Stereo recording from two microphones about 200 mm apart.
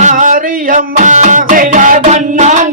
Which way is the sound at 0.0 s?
40° right (ahead or behind).